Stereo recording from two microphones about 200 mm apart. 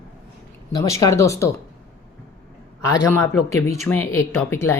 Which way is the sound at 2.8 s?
15° left (ahead or behind).